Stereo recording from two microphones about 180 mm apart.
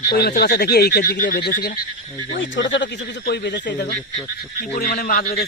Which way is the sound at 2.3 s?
90° left.